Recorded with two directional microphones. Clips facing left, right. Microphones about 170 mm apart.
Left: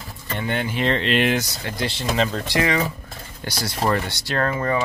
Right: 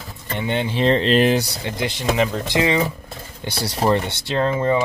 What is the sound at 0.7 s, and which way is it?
Speech, 35° right (ahead or behind).